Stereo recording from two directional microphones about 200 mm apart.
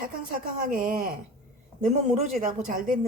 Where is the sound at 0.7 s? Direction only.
45° right (ahead or behind).